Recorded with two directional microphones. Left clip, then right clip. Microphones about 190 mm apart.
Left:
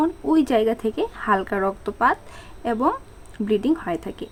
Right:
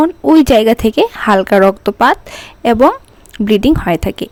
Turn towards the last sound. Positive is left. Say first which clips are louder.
# right 12 dB
turn(degrees=-55)  # may be behind; listen again after turning